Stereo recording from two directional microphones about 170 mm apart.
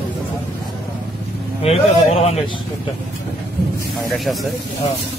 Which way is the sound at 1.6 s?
35° left (ahead or behind).